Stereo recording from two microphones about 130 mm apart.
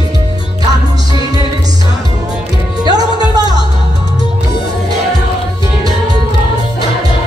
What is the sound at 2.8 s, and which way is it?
Music, 30° right (ahead or behind).